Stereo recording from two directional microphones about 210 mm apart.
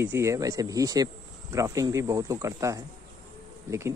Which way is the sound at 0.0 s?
10° right (ahead or behind).